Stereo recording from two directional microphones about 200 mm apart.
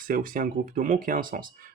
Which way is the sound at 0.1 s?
40° right (ahead or behind).